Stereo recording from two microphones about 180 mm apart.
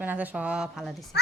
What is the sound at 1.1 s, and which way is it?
Speech, 70° left (ahead or behind).